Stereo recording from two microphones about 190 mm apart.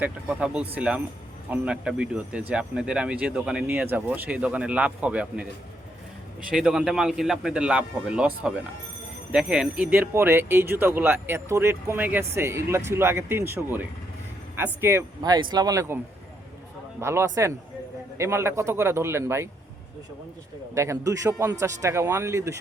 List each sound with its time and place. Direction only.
0.0 s speech: 5° right (ahead or behind)
6.5 s speech: centre (ahead or behind)
17.0 s speech: 15° right (ahead or behind)
20.7 s speech: 15° right (ahead or behind)